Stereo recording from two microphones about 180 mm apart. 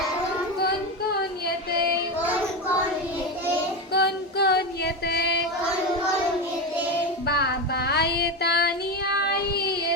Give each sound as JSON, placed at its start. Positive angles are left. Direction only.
{"t": 3.9, "sound": "female singing", "side_deg": 65}
{"t": 7.3, "sound": "child singing", "side_deg": 60}